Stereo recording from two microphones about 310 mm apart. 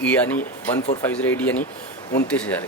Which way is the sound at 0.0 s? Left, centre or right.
Centre.